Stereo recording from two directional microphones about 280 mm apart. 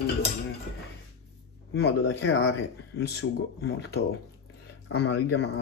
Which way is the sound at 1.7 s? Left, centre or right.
Left.